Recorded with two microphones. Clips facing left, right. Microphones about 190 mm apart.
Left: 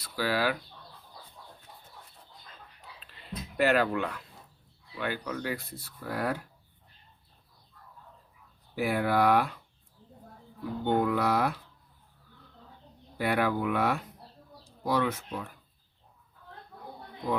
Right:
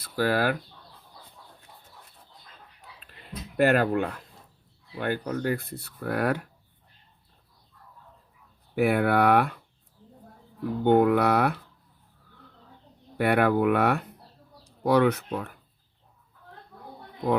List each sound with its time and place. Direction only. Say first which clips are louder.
0.0 s speech: right 4 dB; 50° right (ahead or behind)
3.6 s speech: right 4 dB; 50° right (ahead or behind)
8.7 s speech: right 5 dB; 60° right (ahead or behind)
10.6 s speech: right 7 dB; 60° right (ahead or behind)
13.1 s speech: right 6 dB; 60° right (ahead or behind)